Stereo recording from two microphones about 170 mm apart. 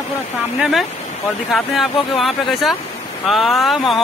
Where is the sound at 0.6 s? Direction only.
Centre (ahead or behind).